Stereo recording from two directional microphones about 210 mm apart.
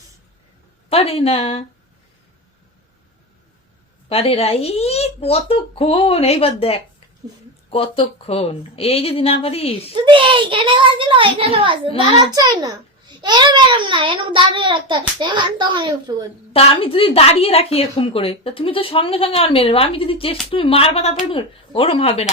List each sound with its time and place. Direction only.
0.9 s speech: 30° left (ahead or behind)
4.1 s speech: 30° left (ahead or behind)
9.9 s a child's voice: 25° right (ahead or behind)
16.5 s speech: 25° left (ahead or behind)